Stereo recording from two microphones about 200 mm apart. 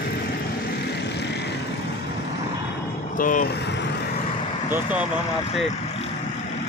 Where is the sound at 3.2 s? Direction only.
40° left (ahead or behind).